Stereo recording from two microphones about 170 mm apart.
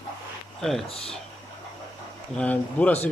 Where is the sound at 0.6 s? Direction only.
Centre (ahead or behind).